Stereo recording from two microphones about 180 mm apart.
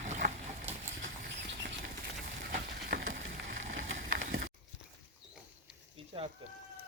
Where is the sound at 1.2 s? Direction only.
65° right (ahead or behind).